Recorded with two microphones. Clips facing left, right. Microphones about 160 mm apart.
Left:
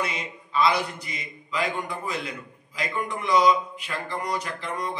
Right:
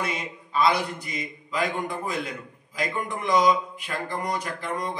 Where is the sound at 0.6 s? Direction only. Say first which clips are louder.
Even; 50° right (ahead or behind).